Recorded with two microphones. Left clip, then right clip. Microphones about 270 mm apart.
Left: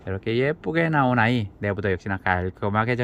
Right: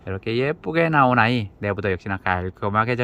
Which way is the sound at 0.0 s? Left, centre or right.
Centre.